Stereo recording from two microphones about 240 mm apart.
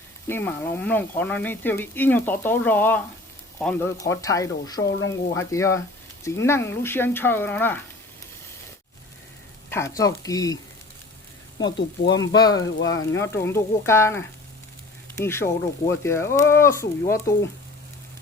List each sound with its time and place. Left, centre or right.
0.3 s speech: centre
9.6 s speech: centre
12.2 s speech: centre